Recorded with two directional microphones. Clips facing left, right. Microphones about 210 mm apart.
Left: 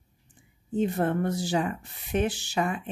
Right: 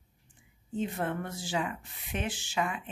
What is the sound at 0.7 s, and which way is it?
Speech, 40° left (ahead or behind).